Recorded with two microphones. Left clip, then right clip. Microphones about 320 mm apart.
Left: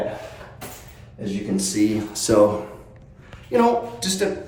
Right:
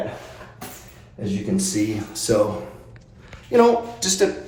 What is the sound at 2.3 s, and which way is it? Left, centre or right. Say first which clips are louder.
Speech: left 3 dB; centre.